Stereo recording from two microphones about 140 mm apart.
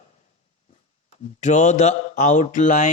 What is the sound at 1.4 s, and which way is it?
Speech, 55° left (ahead or behind).